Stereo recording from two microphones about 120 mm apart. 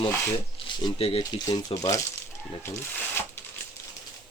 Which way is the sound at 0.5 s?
50° left (ahead or behind).